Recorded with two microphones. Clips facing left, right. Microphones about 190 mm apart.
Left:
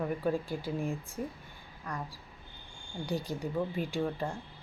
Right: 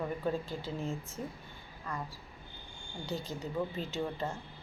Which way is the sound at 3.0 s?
15° left (ahead or behind).